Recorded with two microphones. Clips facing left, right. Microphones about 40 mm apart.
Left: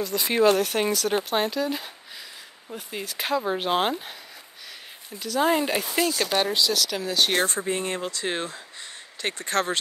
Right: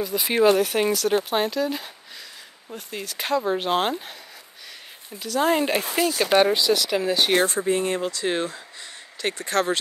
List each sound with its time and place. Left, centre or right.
0.0 s speech: centre
5.2 s speech: centre